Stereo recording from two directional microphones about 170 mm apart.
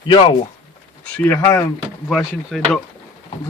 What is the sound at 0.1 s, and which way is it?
Speech, 30° left (ahead or behind).